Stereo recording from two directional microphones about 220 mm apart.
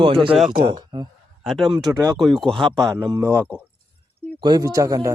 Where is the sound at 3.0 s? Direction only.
15° right (ahead or behind).